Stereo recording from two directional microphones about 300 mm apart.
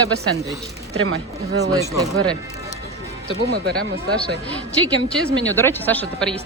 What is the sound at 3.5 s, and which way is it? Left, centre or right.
Speech, right.